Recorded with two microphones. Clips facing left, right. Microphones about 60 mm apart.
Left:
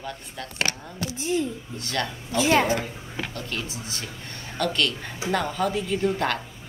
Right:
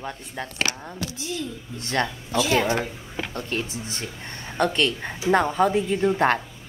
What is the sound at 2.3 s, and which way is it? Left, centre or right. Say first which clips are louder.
Speech: left 1 dB; left.